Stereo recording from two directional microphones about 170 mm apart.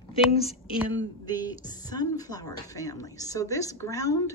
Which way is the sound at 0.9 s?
25° left (ahead or behind).